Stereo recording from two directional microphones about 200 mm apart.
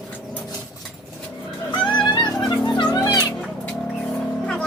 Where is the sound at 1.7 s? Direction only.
25° left (ahead or behind).